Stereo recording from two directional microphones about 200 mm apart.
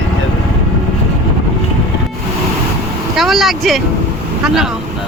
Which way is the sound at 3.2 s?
Centre (ahead or behind).